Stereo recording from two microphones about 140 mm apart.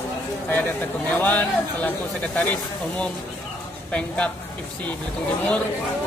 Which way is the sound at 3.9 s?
10° left (ahead or behind).